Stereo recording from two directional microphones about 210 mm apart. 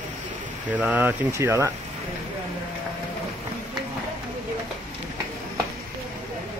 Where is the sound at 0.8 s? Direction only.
5° right (ahead or behind).